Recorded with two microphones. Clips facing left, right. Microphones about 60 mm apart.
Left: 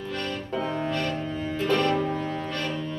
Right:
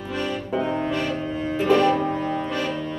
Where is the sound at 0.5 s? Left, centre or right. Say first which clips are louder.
Right 3 dB; centre.